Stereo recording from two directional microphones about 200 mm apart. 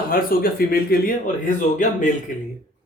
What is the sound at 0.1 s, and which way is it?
Speech, 45° left (ahead or behind).